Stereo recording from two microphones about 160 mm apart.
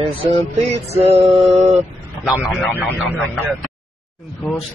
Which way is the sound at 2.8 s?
Centre (ahead or behind).